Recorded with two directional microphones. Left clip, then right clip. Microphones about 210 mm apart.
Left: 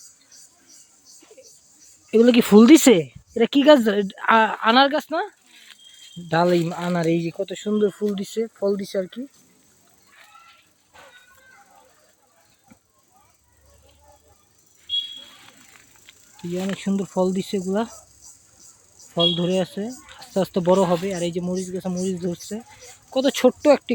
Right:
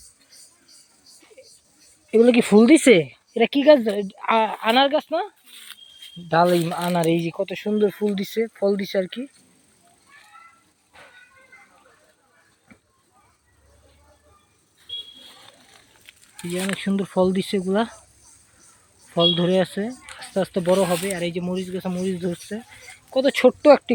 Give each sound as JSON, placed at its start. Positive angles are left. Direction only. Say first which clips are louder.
{"t": 1.4, "sound": "a sound", "louder": "right 2 dB", "side_deg": 15}
{"t": 2.0, "sound": "speech", "louder": "even", "side_deg": 20}
{"t": 2.9, "sound": "speech", "louder": "right 2 dB", "side_deg": 0}
{"t": 3.3, "sound": "speech", "louder": "even", "side_deg": 25}
{"t": 5.5, "sound": "rattle", "louder": "right 5 dB", "side_deg": -55}
{"t": 6.2, "sound": "speech", "louder": "right 1 dB", "side_deg": 20}
{"t": 16.4, "sound": "a sound", "louder": "right 1 dB", "side_deg": -60}
{"t": 16.7, "sound": "speech", "louder": "right 2 dB", "side_deg": 5}
{"t": 19.0, "sound": "speech", "louder": "right 2 dB", "side_deg": -5}
{"t": 20.1, "sound": "speech", "louder": "left 1 dB", "side_deg": 20}